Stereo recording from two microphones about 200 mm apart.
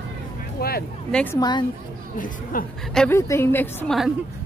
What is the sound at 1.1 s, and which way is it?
Speech, 5° left (ahead or behind).